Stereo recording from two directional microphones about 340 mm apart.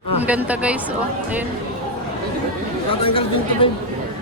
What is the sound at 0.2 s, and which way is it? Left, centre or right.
Speech, centre.